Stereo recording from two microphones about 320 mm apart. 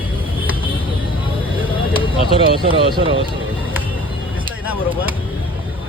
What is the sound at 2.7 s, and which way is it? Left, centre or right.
Speech, centre.